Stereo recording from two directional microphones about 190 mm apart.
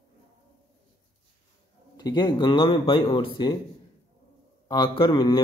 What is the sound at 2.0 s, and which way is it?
Speech, 20° left (ahead or behind).